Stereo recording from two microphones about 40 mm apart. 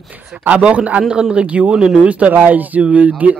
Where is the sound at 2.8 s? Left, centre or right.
Right.